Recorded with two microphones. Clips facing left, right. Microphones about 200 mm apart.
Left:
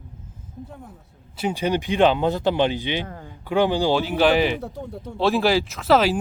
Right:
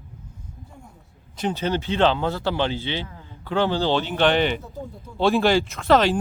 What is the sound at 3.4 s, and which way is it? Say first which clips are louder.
Speech: left 2 dB; 15° left (ahead or behind).